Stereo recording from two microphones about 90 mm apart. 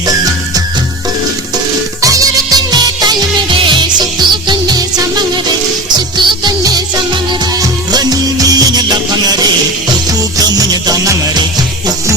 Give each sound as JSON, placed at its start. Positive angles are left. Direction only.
{"t": 0.0, "sound": "music", "side_deg": -45}
{"t": 2.0, "sound": "music", "side_deg": -40}
{"t": 3.5, "sound": "music", "side_deg": -60}
{"t": 6.1, "sound": "music", "side_deg": -50}